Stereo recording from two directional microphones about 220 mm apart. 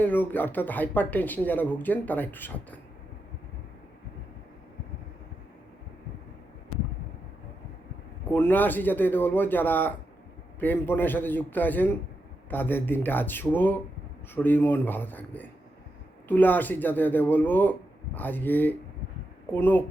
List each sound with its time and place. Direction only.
0.0 s speech: 10° left (ahead or behind)
8.3 s speech: 10° left (ahead or behind)